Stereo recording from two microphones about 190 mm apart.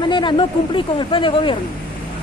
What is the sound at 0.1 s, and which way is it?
Speech, 25° left (ahead or behind).